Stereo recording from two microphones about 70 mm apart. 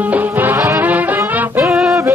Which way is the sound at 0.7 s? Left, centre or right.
Right.